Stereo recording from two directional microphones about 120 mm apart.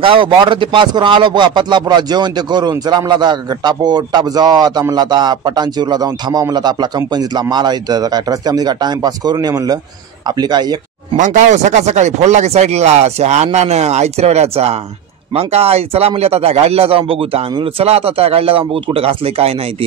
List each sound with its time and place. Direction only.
0.0 s speech: 45° right (ahead or behind)
11.1 s speech: 90° right; by 19.5 s 55° right (ahead or behind)